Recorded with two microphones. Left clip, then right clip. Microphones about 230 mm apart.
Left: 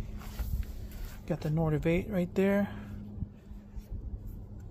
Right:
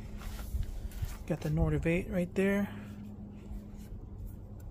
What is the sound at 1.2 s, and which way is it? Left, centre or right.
Speech, centre.